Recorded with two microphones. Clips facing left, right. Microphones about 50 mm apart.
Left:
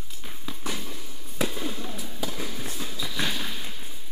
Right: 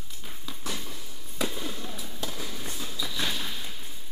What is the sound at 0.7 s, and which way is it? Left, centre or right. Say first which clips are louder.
Fireworks: left 2 dB; centre.